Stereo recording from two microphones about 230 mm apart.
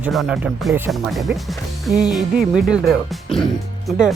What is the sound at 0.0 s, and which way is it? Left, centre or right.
Speech, centre.